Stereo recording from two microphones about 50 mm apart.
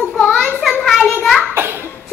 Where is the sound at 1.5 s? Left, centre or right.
Right.